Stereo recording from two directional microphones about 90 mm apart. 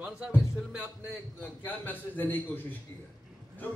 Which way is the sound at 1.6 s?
20° left (ahead or behind).